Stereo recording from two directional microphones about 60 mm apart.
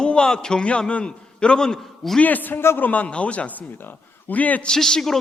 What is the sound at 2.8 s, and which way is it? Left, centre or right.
A man's voice, left.